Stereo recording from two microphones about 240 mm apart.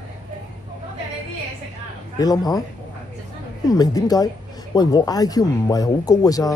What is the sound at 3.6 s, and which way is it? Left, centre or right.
Speech, centre.